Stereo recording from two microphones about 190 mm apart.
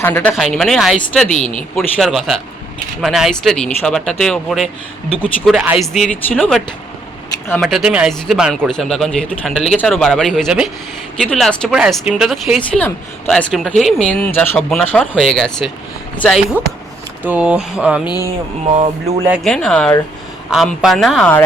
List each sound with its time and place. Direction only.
0.0 s speech: 10° left (ahead or behind)
1.3 s speech: 40° left (ahead or behind)
1.7 s speech: centre (ahead or behind)
7.6 s speech: 5° right (ahead or behind)
17.2 s speech: 5° right (ahead or behind)
18.0 s speech: 20° left (ahead or behind)
18.7 s speech: 30° right (ahead or behind)
19.3 s speech: centre (ahead or behind)